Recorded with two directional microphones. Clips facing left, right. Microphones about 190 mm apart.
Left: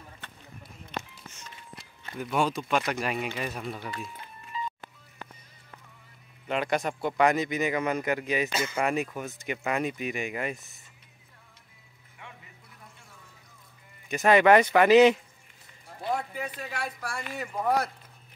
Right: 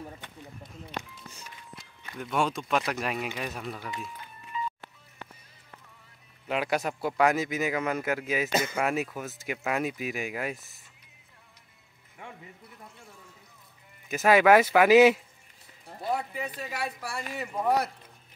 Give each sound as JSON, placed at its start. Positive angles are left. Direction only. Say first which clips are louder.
{"t": 1.8, "sound": "speech", "louder": "left 3 dB", "side_deg": 0}
{"t": 4.5, "sound": "music", "louder": "right 1 dB", "side_deg": 35}
{"t": 6.4, "sound": "speech", "louder": "left 1 dB", "side_deg": -5}
{"t": 14.0, "sound": "speech", "louder": "even", "side_deg": -5}